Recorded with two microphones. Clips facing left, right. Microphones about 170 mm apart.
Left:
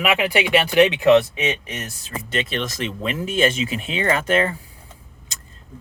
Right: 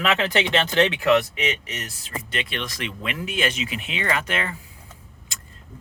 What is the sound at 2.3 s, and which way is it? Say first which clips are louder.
Speech: left 6 dB; 40° left (ahead or behind).